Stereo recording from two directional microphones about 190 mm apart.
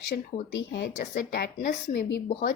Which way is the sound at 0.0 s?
65° left (ahead or behind).